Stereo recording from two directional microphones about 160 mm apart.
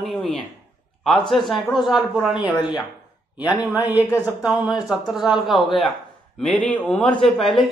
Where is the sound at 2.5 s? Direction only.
30° left (ahead or behind).